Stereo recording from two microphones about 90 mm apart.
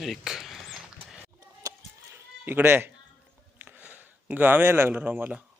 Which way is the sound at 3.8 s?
15° right (ahead or behind).